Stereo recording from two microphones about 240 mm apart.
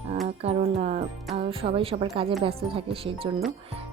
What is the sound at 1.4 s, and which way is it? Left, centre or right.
Speech, right.